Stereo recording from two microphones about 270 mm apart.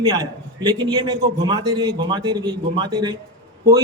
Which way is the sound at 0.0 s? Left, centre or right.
Centre.